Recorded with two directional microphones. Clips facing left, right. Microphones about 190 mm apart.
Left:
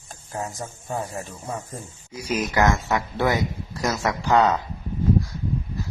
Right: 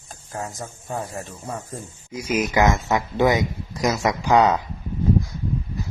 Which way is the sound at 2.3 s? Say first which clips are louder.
Right 2 dB; 15° right (ahead or behind).